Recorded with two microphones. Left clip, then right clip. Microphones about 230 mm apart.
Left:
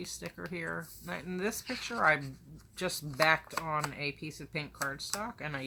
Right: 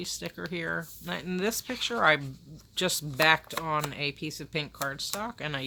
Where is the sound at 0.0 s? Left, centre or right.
Right.